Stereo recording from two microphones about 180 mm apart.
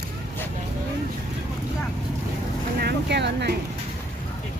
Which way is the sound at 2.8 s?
65° right (ahead or behind).